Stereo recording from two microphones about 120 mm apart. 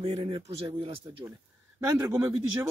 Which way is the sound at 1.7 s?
20° right (ahead or behind).